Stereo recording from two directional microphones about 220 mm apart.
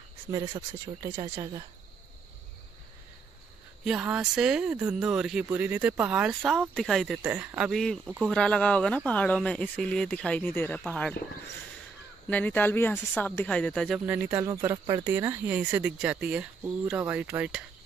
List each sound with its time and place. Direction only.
0.3 s speech: 15° right (ahead or behind)
3.8 s speech: 5° right (ahead or behind)
12.3 s speech: 5° left (ahead or behind)